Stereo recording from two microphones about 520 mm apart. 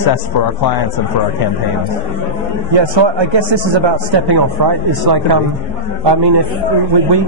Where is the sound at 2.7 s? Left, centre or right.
Right.